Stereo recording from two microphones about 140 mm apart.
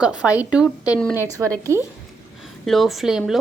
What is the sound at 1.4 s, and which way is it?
Speech, 25° right (ahead or behind).